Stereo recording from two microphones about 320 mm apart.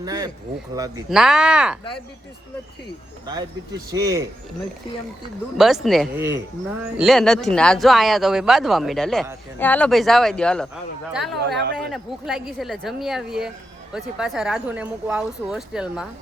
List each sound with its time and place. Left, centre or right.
0.0 s a sound: centre
0.8 s speech: centre
3.9 s speech: centre
5.5 s speech: centre
11.3 s speech: right
11.9 s speech: centre